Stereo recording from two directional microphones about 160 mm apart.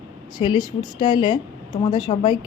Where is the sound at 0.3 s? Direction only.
30° left (ahead or behind).